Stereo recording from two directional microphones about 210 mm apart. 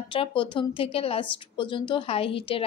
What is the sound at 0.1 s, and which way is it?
A woman's voice, 25° left (ahead or behind).